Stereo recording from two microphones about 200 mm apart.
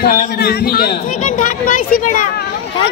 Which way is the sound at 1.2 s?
40° left (ahead or behind).